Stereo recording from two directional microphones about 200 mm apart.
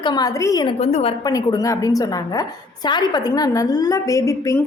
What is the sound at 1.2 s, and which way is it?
A woman's voice, 20° left (ahead or behind).